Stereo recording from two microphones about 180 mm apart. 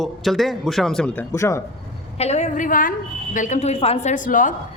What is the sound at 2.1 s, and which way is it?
A woman's voice, 35° left (ahead or behind).